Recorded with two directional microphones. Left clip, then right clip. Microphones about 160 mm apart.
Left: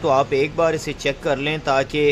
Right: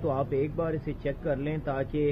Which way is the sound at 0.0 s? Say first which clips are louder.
Left 11 dB; 30° left (ahead or behind).